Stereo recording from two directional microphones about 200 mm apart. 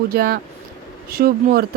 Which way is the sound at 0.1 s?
50° right (ahead or behind).